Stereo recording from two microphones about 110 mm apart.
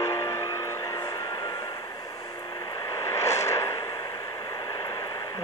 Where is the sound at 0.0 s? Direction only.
25° left (ahead or behind).